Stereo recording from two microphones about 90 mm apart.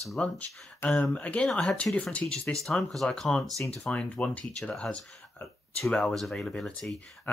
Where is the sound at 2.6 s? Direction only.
5° left (ahead or behind).